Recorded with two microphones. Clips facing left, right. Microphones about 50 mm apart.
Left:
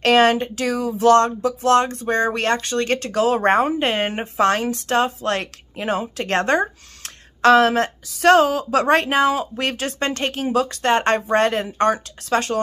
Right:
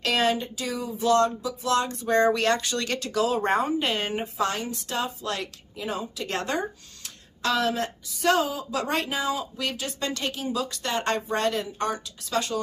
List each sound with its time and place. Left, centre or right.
0.0 s speech: left
4.1 s speech: left